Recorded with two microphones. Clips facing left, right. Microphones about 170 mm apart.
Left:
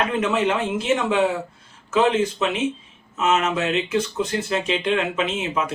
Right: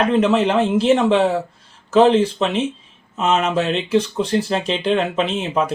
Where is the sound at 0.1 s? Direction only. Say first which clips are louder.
Right 5 dB; 35° right (ahead or behind).